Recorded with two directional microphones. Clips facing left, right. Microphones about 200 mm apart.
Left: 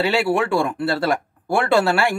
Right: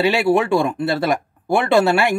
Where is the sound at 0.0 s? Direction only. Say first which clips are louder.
Right 3 dB; 20° right (ahead or behind).